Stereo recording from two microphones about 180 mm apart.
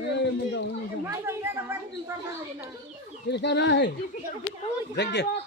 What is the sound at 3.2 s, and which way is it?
Speech, 70° left (ahead or behind).